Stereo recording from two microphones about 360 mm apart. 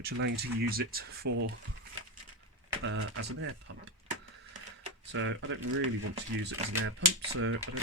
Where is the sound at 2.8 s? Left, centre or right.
Right.